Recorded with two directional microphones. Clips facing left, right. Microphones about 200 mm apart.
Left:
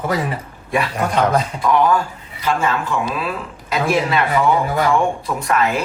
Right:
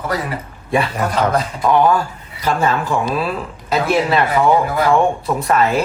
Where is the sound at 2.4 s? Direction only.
35° right (ahead or behind).